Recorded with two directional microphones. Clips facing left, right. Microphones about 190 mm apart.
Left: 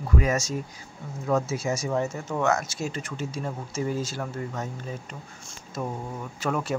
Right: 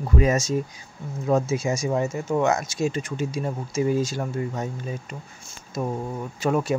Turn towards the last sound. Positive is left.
turn(degrees=-15)  # may be behind; listen again after turning